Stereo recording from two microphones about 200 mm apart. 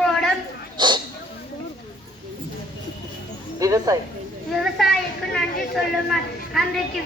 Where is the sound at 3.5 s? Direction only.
15° right (ahead or behind).